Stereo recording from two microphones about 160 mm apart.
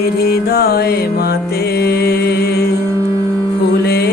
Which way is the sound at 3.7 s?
80° left.